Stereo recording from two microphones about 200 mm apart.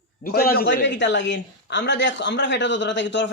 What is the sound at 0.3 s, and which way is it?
A man's voice, 50° left (ahead or behind).